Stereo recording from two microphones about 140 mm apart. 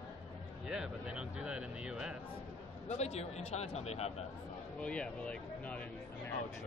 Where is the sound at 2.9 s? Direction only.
50° left (ahead or behind).